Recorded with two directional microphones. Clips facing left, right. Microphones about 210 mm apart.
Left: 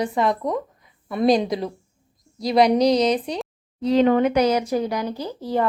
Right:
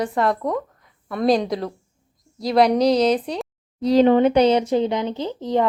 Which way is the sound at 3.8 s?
35° right (ahead or behind).